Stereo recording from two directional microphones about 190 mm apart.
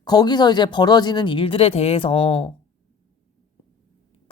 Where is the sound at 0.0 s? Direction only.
20° left (ahead or behind).